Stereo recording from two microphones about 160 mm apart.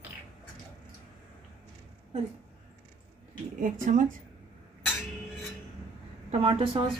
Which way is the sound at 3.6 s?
55° right (ahead or behind).